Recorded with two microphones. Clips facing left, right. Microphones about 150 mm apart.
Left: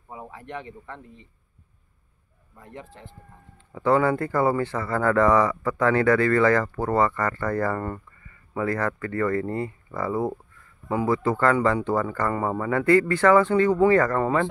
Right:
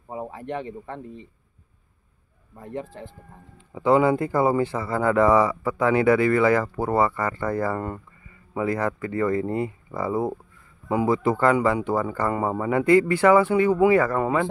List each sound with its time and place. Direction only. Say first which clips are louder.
0.1 s speech: right 6 dB; 35° right (ahead or behind)
2.5 s speech: right 8 dB; 35° right (ahead or behind)
3.5 s speech: right 2 dB; 15° right (ahead or behind)